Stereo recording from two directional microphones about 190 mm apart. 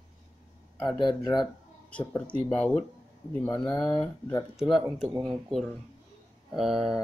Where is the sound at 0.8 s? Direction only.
25° left (ahead or behind).